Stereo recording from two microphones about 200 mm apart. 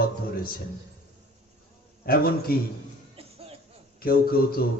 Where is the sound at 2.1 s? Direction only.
50° left (ahead or behind).